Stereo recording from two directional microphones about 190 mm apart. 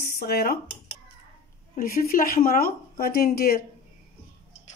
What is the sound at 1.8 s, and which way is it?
Speech, 50° left (ahead or behind).